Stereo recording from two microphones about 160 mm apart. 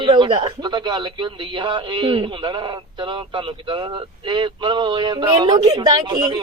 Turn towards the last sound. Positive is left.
turn(degrees=-25)  # may be behind; listen again after turning